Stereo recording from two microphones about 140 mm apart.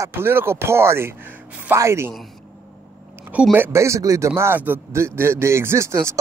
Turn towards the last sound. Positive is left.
turn(degrees=-20)  # may be behind; listen again after turning